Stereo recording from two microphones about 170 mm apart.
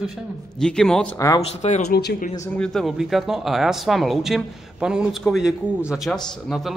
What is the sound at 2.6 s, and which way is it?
Speech, centre (ahead or behind).